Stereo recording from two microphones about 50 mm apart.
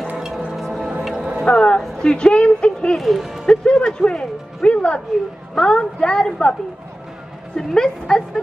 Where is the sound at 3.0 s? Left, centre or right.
Centre.